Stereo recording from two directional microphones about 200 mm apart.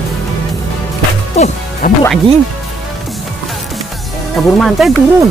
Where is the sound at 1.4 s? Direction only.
35° left (ahead or behind).